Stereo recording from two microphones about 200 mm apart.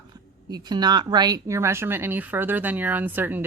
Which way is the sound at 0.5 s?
20° right (ahead or behind).